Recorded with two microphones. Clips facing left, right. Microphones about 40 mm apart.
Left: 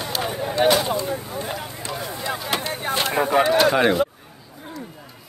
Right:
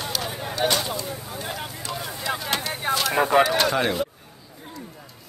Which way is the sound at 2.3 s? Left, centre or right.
Centre.